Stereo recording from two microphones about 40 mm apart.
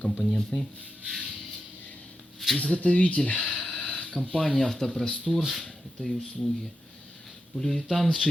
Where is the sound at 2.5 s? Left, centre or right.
Left.